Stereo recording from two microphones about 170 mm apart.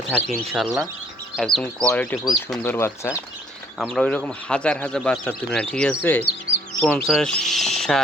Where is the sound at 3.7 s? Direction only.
5° left (ahead or behind).